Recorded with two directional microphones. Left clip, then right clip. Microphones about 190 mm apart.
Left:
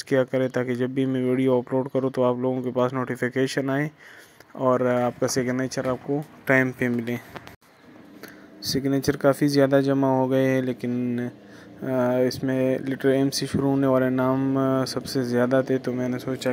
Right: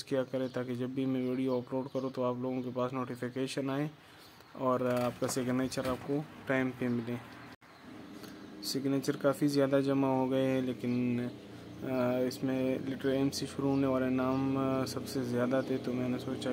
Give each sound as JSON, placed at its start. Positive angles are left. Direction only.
{"t": 0.1, "sound": "speech", "side_deg": 35}
{"t": 6.4, "sound": "speech", "side_deg": 40}
{"t": 8.6, "sound": "speech", "side_deg": 40}
{"t": 9.9, "sound": "mantra", "side_deg": 25}
{"t": 10.3, "sound": "speech", "side_deg": 35}
{"t": 14.3, "sound": "speech", "side_deg": 30}